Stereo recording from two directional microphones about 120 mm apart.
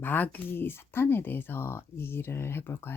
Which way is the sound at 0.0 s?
15° left (ahead or behind).